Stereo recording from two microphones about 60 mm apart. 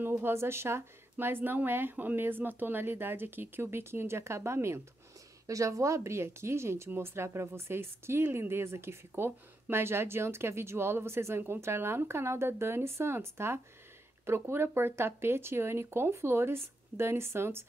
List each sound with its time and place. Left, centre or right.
0.2 s speech: right
5.5 s speech: right